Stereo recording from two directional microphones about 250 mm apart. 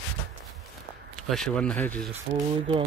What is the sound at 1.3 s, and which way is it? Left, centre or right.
Speech, centre.